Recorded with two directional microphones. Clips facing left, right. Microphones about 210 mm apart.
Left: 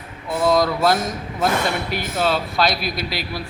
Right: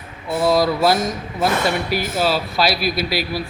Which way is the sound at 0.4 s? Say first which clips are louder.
Right 1 dB; 5° right (ahead or behind).